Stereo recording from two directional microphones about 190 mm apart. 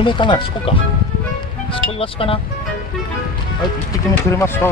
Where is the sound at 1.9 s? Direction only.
30° left (ahead or behind).